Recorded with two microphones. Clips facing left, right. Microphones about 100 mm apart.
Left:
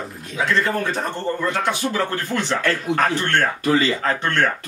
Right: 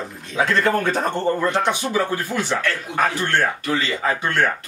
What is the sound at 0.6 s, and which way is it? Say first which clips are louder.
Speech: right 4 dB; 55° right (ahead or behind).